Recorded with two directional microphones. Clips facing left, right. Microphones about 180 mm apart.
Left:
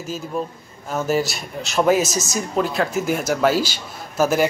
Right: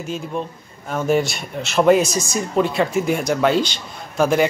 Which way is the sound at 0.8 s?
Centre (ahead or behind).